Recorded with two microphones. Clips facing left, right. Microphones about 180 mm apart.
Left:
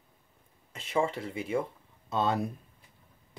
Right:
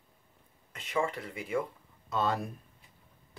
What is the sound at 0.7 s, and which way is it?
Speech, 30° left (ahead or behind).